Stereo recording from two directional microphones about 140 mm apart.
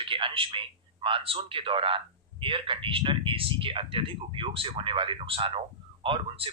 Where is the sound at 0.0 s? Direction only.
40° right (ahead or behind).